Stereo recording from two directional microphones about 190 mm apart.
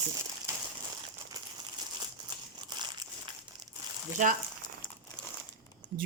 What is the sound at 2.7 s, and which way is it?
Crumpling, 20° right (ahead or behind).